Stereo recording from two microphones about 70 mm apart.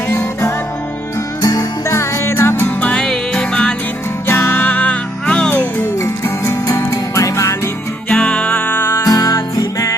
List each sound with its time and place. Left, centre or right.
0.1 s music: left
1.4 s music: left
2.0 s music: left
2.8 s music: centre
4.3 s music: left
6.2 s music: left
8.1 s music: centre; by 9.0 s left
9.0 s music: left